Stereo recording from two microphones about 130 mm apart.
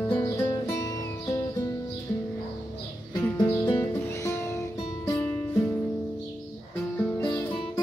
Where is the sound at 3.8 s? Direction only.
20° left (ahead or behind).